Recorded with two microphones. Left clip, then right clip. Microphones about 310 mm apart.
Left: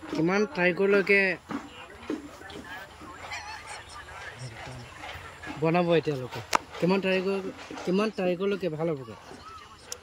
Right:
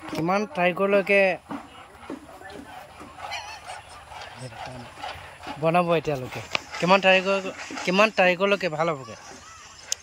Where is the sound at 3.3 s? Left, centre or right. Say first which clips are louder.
Right 3 dB; centre.